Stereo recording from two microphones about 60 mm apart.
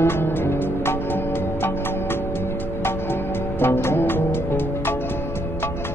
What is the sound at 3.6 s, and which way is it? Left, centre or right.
Music, left.